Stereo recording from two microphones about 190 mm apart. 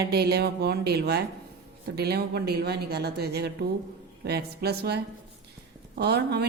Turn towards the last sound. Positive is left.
turn(degrees=-60)  # may be behind; listen again after turning